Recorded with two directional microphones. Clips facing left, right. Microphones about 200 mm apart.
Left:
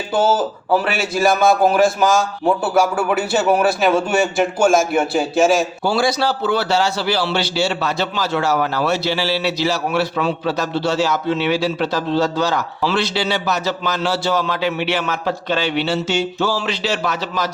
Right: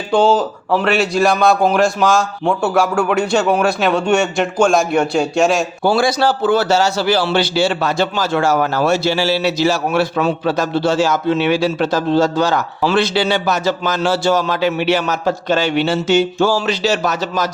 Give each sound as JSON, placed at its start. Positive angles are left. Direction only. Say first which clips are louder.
{"t": 0.1, "sound": "a man's voice", "louder": "right 4 dB", "side_deg": 5}
{"t": 5.8, "sound": "a man's voice", "louder": "right 3 dB", "side_deg": -50}